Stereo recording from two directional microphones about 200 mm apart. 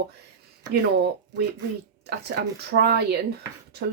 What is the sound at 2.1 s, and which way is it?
Speech, 55° right (ahead or behind).